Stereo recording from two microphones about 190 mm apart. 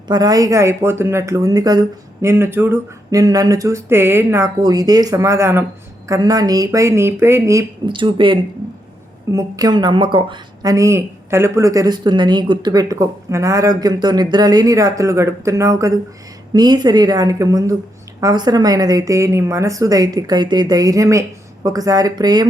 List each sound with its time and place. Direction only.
0.1 s a woman's voice: 20° right (ahead or behind)